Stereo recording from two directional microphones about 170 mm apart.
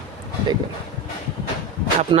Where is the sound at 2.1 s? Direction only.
30° right (ahead or behind).